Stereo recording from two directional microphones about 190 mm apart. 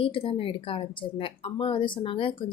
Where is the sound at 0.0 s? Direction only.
30° left (ahead or behind).